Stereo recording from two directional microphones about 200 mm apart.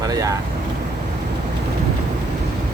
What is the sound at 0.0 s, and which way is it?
Vehicle, 20° right (ahead or behind).